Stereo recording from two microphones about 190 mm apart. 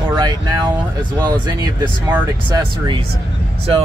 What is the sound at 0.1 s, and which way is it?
Speech, 20° right (ahead or behind).